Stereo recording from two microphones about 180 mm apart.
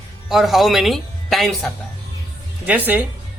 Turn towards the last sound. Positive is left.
turn(degrees=-10)  # may be behind; listen again after turning